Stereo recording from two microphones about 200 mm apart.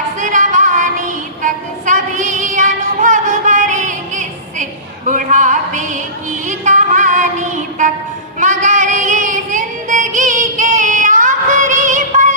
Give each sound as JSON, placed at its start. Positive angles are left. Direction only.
{"t": 0.2, "sound": "child singing", "side_deg": -40}
{"t": 6.5, "sound": "music", "side_deg": -35}
{"t": 8.4, "sound": "female singing", "side_deg": -40}